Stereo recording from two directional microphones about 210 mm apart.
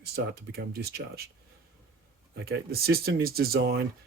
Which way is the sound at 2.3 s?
50° right (ahead or behind).